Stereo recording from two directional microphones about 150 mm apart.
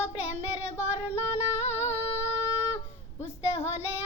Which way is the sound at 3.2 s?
45° left (ahead or behind).